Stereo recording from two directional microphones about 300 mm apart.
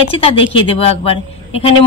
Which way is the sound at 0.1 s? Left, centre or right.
Centre.